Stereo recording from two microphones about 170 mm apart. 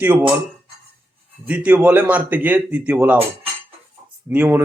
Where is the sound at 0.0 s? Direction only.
10° right (ahead or behind).